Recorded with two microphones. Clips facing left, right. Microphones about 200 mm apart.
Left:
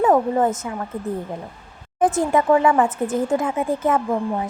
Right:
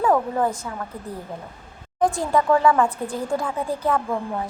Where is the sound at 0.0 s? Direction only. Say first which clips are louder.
Left 3 dB; 20° left (ahead or behind).